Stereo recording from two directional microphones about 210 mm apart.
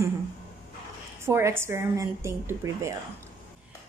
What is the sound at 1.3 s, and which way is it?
A woman's voice, 15° right (ahead or behind).